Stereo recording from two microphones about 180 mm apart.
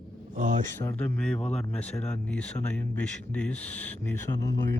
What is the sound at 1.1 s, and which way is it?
Speech, 5° left (ahead or behind).